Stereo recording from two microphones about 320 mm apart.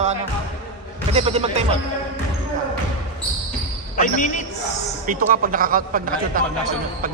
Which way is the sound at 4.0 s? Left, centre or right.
Left.